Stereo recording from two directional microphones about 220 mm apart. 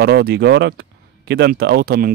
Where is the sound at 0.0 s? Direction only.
45° right (ahead or behind).